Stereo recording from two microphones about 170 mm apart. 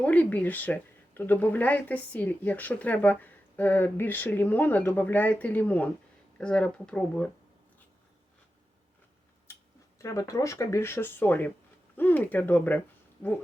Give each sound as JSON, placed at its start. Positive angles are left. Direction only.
{"t": 0.0, "sound": "speech", "side_deg": 10}
{"t": 10.0, "sound": "speech", "side_deg": 20}